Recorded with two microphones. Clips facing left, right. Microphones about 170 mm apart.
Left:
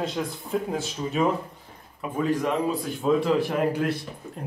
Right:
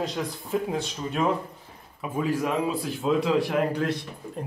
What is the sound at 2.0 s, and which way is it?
Speech, 10° right (ahead or behind).